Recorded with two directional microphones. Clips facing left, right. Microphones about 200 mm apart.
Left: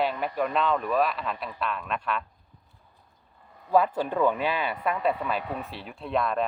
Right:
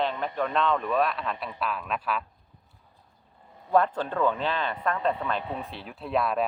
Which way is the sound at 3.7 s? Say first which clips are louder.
Left 1 dB; 5° left (ahead or behind).